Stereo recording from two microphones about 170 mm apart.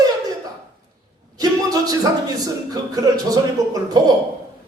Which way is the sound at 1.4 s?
20° right (ahead or behind).